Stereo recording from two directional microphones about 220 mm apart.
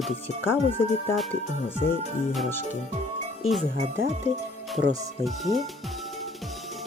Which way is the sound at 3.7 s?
30° right (ahead or behind).